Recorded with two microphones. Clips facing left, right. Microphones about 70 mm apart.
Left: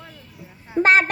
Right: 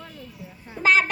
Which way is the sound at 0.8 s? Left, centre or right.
Left.